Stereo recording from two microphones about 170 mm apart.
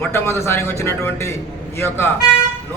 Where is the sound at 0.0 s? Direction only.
15° left (ahead or behind).